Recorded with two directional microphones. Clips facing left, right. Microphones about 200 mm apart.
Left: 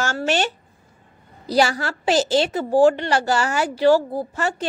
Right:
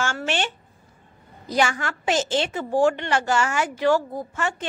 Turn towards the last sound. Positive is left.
turn(degrees=35)  # may be behind; listen again after turning